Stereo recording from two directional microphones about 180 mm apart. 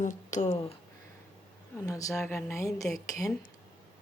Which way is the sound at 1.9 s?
20° left (ahead or behind).